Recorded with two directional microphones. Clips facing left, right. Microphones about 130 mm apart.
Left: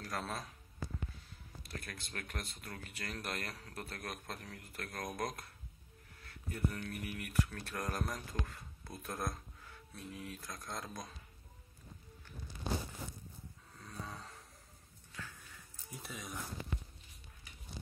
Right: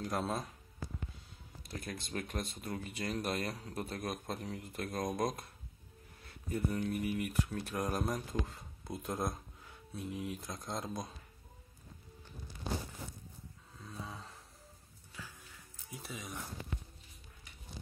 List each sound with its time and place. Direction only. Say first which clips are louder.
0.0 s speech: right 5 dB; 20° right (ahead or behind)
1.7 s speech: right 6 dB; 20° right (ahead or behind)
13.7 s a sound: right 1 dB; centre (ahead or behind)
15.5 s music: right 1 dB; centre (ahead or behind)